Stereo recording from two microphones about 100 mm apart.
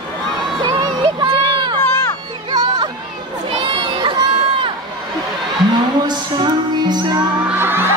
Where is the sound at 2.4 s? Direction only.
45° right (ahead or behind).